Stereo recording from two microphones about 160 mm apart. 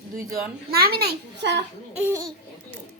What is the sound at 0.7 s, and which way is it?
Speech, 75° right (ahead or behind).